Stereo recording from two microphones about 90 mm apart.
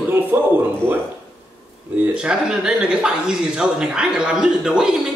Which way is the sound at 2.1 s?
10° right (ahead or behind).